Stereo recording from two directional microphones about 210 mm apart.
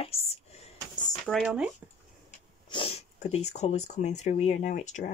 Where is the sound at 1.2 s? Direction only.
Centre (ahead or behind).